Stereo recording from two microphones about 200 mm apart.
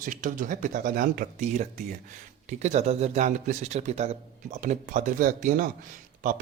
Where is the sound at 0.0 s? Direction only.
40° right (ahead or behind).